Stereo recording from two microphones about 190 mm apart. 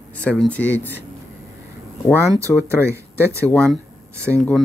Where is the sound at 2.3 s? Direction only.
15° right (ahead or behind).